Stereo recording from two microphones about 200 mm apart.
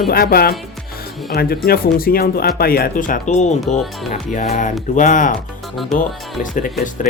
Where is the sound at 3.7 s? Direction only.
Centre (ahead or behind).